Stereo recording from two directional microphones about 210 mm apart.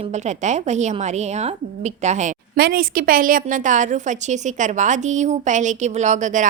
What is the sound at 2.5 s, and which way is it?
Speech, 45° right (ahead or behind).